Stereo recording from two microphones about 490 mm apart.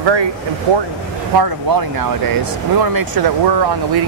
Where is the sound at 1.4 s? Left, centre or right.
Right.